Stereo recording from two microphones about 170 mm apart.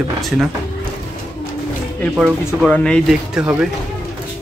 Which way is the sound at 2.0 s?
5° left (ahead or behind).